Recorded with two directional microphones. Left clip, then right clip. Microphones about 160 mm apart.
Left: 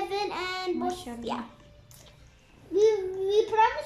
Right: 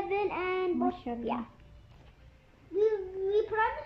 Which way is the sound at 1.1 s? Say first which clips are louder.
Right 3 dB; 25° right (ahead or behind).